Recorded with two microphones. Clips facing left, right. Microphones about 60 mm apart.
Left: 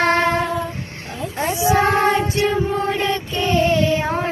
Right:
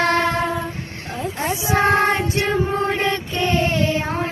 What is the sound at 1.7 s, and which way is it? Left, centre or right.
Choir, right.